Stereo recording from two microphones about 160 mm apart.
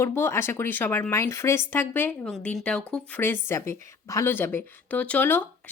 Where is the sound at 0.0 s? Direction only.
15° left (ahead or behind).